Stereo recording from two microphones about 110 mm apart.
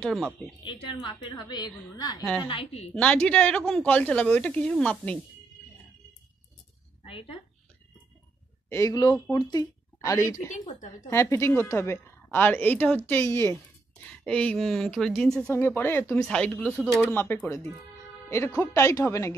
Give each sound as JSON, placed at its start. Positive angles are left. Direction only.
{"t": 0.0, "sound": "speech", "side_deg": 0}
{"t": 0.7, "sound": "a woman's voice", "side_deg": 50}
{"t": 2.4, "sound": "a woman's voice", "side_deg": 55}
{"t": 3.0, "sound": "speech", "side_deg": 10}
{"t": 7.1, "sound": "speech", "side_deg": 55}
{"t": 8.6, "sound": "a man's voice", "side_deg": 25}
{"t": 14.2, "sound": "speech", "side_deg": 10}
{"t": 15.5, "sound": "a woman's voice", "side_deg": 20}
{"t": 16.2, "sound": "speech", "side_deg": 5}
{"t": 16.8, "sound": "a woman's voice", "side_deg": 20}